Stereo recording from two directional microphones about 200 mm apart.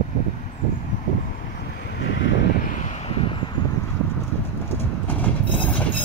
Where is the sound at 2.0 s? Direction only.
65° left (ahead or behind).